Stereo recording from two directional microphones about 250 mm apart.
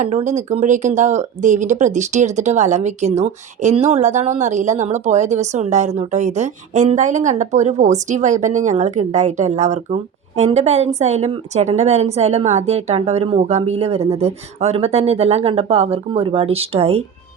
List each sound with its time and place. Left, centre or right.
0.0 s speech: right